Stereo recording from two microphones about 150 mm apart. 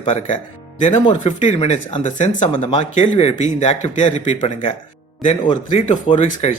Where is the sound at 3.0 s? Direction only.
50° left (ahead or behind).